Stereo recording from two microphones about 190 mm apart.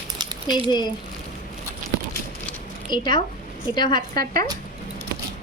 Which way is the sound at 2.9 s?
25° left (ahead or behind).